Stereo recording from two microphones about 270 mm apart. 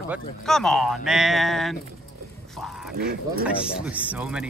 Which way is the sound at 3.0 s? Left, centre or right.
Right.